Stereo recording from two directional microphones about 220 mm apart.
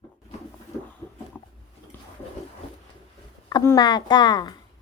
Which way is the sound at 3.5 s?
15° left (ahead or behind).